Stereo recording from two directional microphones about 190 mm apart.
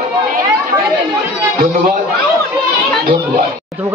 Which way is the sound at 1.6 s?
50° right (ahead or behind).